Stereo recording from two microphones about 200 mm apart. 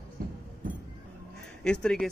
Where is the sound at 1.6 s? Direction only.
5° left (ahead or behind).